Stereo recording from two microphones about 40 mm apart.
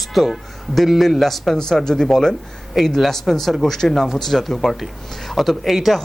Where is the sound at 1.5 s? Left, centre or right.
Centre.